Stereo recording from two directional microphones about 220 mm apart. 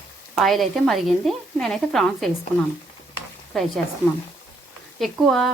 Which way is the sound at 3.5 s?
Centre (ahead or behind).